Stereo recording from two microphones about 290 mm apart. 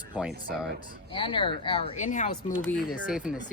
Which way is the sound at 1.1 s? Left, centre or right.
Centre.